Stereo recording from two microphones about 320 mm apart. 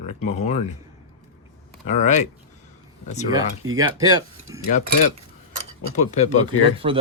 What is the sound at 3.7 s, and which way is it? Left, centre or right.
Speech, centre.